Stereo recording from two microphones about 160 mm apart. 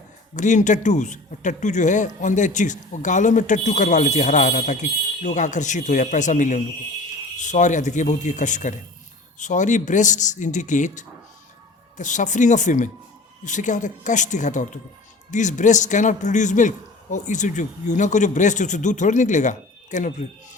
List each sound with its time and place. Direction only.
0.3 s speech: 50° left (ahead or behind)